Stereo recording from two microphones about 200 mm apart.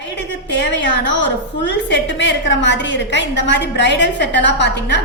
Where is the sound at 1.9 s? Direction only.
65° left (ahead or behind).